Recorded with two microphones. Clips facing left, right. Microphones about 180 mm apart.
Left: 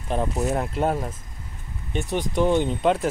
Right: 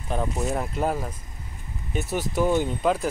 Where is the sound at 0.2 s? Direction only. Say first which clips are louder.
Left 2 dB; 5° left (ahead or behind).